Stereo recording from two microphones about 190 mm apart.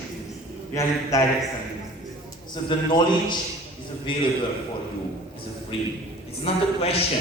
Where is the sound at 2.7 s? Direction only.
25° left (ahead or behind).